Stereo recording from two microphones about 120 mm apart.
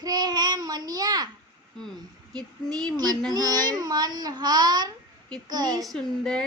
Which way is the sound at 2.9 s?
35° right (ahead or behind).